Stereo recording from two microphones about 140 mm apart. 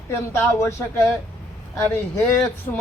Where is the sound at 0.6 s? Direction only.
20° left (ahead or behind).